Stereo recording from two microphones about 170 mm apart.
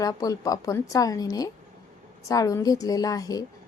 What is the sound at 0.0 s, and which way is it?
Speech, 20° left (ahead or behind).